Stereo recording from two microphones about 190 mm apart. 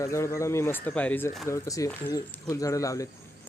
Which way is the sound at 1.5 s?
15° left (ahead or behind).